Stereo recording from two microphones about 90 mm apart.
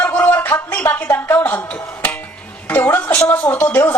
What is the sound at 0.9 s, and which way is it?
Music, 20° left (ahead or behind).